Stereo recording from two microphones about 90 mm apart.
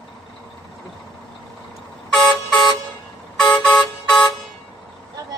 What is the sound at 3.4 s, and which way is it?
Vehicle horn, 5° left (ahead or behind).